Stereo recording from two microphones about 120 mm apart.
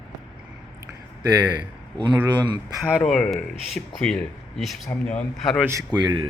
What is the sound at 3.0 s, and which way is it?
Speech, 5° left (ahead or behind).